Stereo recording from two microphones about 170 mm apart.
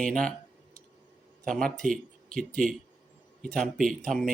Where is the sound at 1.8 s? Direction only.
50° right (ahead or behind).